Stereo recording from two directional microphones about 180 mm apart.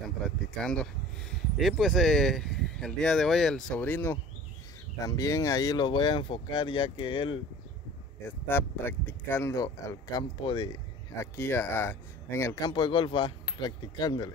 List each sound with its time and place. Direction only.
0.6 s speech: 5° left (ahead or behind); by 7.3 s 25° left (ahead or behind)
8.5 s speech: 10° left (ahead or behind)